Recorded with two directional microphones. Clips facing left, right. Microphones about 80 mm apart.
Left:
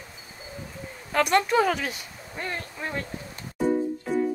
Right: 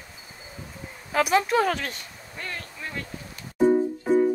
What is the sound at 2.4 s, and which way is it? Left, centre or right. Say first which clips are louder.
Speech: left 3 dB; left.